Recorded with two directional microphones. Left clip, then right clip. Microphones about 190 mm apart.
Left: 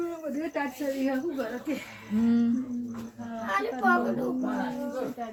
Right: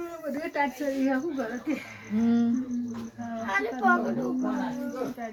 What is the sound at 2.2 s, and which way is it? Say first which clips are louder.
Speech: even; 5° left (ahead or behind).